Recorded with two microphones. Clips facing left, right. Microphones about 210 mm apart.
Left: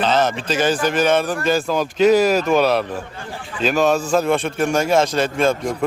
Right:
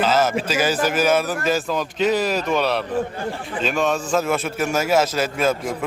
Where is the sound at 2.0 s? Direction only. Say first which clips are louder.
Left 7 dB; 45° left (ahead or behind).